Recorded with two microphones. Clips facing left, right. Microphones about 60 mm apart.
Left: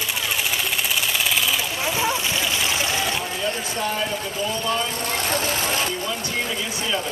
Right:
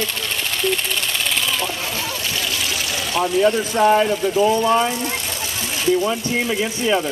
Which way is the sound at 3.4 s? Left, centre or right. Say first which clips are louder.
Right 11 dB; right.